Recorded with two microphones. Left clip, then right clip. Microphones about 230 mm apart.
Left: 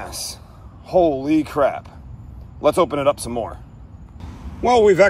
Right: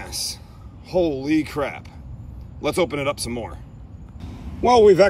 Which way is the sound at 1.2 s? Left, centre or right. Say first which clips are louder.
Left 5 dB; left.